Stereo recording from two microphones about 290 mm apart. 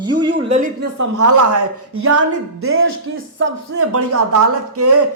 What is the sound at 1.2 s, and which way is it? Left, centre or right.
Speech, right.